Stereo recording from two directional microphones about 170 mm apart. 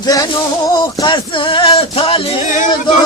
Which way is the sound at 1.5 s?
30° left (ahead or behind).